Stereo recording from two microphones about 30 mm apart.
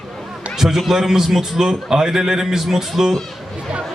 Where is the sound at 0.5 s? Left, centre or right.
Centre.